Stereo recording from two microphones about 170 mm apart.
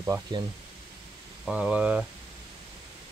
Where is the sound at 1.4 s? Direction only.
5° right (ahead or behind).